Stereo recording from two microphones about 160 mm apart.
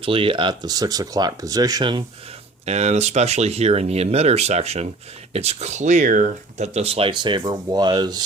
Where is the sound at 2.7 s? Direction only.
45° right (ahead or behind).